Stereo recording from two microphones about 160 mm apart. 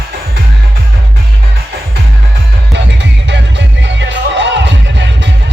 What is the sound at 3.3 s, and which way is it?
Music, 90° right.